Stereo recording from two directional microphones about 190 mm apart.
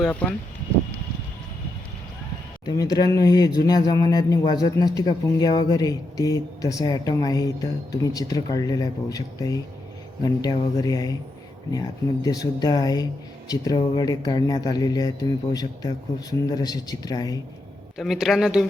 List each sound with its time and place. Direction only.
0.0 s speech: 5° left (ahead or behind)
2.6 s speech: 20° left (ahead or behind)
17.9 s speech: centre (ahead or behind)